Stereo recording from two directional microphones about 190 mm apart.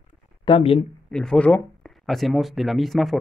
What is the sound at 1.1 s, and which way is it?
Speech, 5° left (ahead or behind).